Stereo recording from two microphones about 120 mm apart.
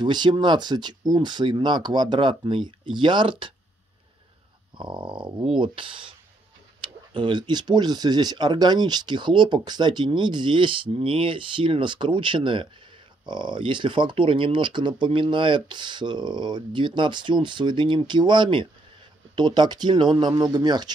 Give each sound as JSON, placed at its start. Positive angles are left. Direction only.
{"t": 0.0, "sound": "speech", "side_deg": -40}
{"t": 4.7, "sound": "dog", "side_deg": -40}
{"t": 6.8, "sound": "speech", "side_deg": -45}